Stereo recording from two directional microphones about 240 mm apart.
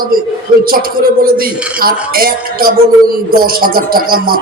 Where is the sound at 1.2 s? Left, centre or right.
Right.